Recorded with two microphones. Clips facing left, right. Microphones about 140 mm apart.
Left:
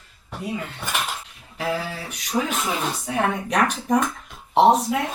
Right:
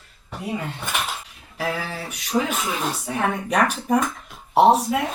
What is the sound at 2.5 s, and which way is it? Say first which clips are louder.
Speech: even; 5° right (ahead or behind).